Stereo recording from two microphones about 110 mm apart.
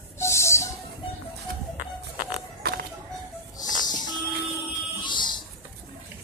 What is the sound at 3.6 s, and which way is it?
Music, 40° left (ahead or behind).